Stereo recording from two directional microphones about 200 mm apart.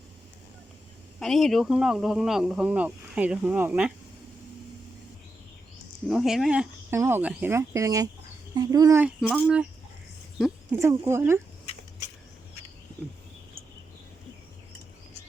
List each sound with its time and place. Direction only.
1.2 s speech: centre (ahead or behind)
6.1 s speech: centre (ahead or behind)
10.3 s a sound: 5° right (ahead or behind)
10.8 s speech: 15° right (ahead or behind)